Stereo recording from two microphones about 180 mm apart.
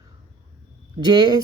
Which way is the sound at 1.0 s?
25° right (ahead or behind).